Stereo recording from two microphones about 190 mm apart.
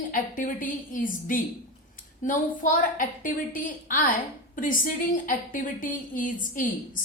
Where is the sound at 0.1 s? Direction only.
45° left (ahead or behind).